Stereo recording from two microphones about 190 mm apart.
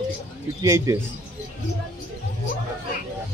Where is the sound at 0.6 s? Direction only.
15° right (ahead or behind).